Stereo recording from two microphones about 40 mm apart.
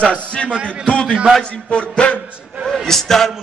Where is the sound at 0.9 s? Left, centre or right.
Left.